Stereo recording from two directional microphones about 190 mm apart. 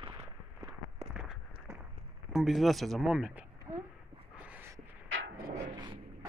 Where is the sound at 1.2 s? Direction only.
5° right (ahead or behind).